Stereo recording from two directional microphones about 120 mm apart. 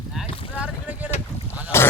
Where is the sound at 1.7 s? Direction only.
20° left (ahead or behind).